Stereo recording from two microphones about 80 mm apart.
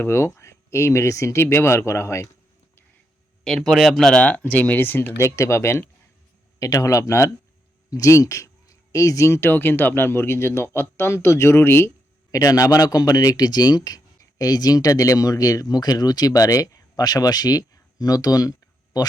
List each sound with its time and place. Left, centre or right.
0.0 s speech: left
3.4 s speech: centre
4.2 s speech: left
6.6 s speech: left
12.3 s speech: left